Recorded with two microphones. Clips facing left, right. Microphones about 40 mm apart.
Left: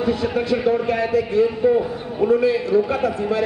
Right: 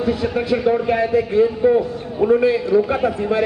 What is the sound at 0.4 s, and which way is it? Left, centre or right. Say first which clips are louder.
A man's voice: right 3 dB; centre.